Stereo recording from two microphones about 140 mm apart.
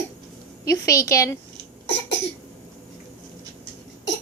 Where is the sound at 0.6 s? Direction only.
20° left (ahead or behind).